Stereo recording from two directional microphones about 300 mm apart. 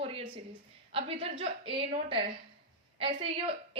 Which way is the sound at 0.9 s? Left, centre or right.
Centre.